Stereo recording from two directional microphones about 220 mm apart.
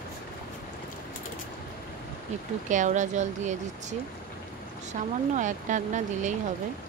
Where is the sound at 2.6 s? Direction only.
35° right (ahead or behind).